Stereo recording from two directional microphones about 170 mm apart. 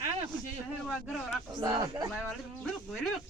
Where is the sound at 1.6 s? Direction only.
20° right (ahead or behind).